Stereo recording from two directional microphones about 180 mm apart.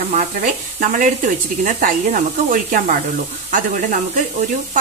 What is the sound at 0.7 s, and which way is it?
Speech, 45° right (ahead or behind).